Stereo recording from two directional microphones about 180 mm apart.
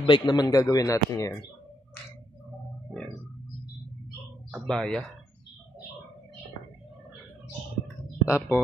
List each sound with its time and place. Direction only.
0.0 s speech: 25° left (ahead or behind)
2.9 s organ: 5° left (ahead or behind)
4.5 s speech: centre (ahead or behind)
7.9 s a sound: 15° left (ahead or behind)